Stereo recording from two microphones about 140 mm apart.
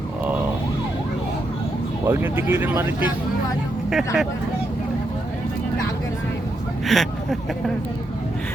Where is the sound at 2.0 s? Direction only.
15° right (ahead or behind).